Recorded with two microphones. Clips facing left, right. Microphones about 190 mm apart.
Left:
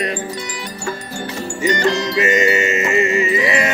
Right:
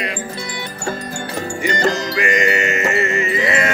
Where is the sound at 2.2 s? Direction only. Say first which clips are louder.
Left 4 dB; 20° left (ahead or behind).